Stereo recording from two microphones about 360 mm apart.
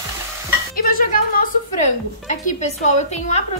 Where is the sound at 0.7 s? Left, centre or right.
Left.